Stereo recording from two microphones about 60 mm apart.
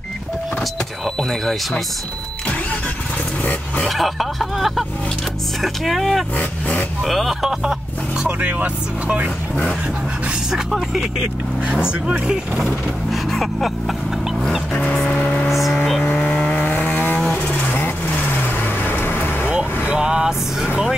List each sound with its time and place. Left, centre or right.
1.4 s speech: centre
3.9 s speech: centre
6.3 s vehicle: left
7.1 s speech: centre
8.4 s speech: right
10.5 s speech: centre
11.6 s speech: centre
13.1 s speech: centre
14.7 s vehicle: centre
15.4 s vehicle: centre
16.0 s a sound: left
16.7 s vehicle: left
20.0 s vehicle: centre